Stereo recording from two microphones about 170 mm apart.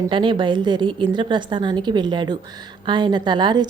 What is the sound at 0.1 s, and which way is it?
A woman's voice, 30° right (ahead or behind).